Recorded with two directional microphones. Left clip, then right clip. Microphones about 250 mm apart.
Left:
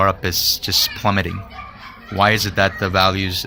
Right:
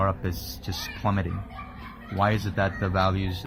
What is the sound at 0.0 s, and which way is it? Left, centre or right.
Speech, left.